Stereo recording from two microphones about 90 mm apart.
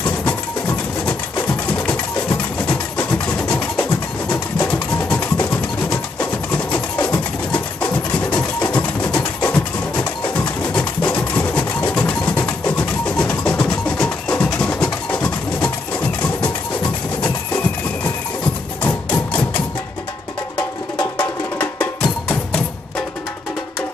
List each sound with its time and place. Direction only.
1.7 s a sound: 10° left (ahead or behind)
4.7 s music: 15° left (ahead or behind)
10.6 s a sound: 15° left (ahead or behind)
14.4 s music: 10° left (ahead or behind)
18.8 s music: 20° left (ahead or behind)
21.2 s music: 20° left (ahead or behind)